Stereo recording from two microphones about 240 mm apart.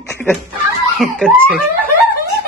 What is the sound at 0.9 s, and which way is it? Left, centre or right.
Speech, centre.